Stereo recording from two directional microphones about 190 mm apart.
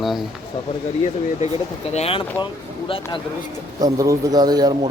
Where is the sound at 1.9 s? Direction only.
30° left (ahead or behind).